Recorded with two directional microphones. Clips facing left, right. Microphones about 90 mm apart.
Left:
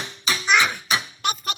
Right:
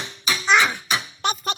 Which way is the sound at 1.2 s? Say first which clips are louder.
Right 2 dB; 30° right (ahead or behind).